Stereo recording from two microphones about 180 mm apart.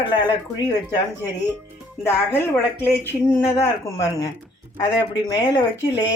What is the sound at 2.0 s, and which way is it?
Speech, 10° left (ahead or behind).